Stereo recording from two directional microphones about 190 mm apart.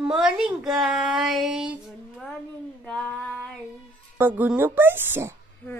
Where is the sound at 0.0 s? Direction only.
5° right (ahead or behind).